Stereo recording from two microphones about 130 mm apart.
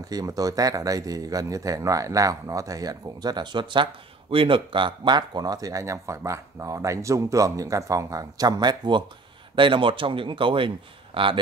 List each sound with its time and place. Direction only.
0.1 s a man's voice: 30° right (ahead or behind)